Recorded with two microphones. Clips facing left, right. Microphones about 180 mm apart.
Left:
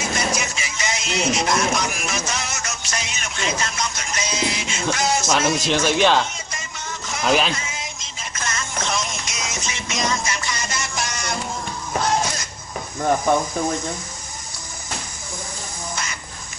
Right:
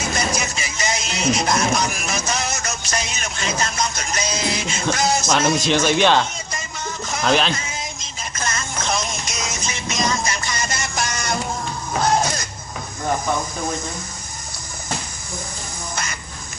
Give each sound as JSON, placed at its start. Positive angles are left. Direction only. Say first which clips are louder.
{"t": 0.1, "sound": "music", "louder": "right 1 dB", "side_deg": -40}
{"t": 5.3, "sound": "speech", "louder": "right 2 dB", "side_deg": 0}
{"t": 7.2, "sound": "speech", "louder": "right 1 dB", "side_deg": 5}
{"t": 7.5, "sound": "music", "louder": "right 2 dB", "side_deg": -40}